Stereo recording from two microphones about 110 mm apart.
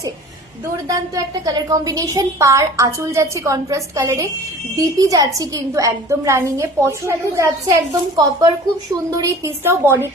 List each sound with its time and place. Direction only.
0.9 s a woman's voice: 35° right (ahead or behind)